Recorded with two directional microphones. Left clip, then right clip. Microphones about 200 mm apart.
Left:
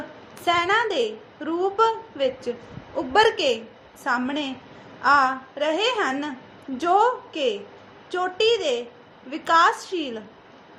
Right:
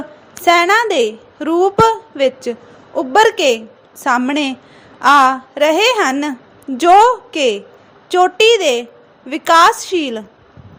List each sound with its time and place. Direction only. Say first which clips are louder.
0.3 s a woman's voice: right 10 dB; 35° right (ahead or behind)